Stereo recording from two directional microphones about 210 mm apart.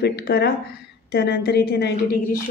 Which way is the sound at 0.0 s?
50° left (ahead or behind).